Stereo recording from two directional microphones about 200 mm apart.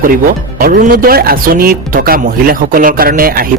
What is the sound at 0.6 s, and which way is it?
A man's voice, 45° right (ahead or behind).